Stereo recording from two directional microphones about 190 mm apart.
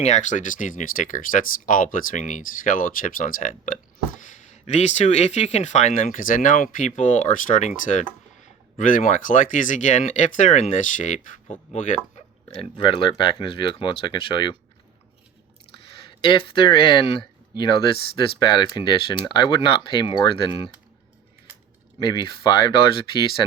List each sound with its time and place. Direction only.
0.0 s speech: 40° left (ahead or behind)
16.2 s speech: 25° left (ahead or behind)
21.9 s speech: 25° left (ahead or behind)